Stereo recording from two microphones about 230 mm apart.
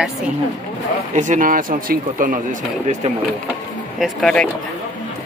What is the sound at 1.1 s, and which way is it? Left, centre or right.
Speech, right.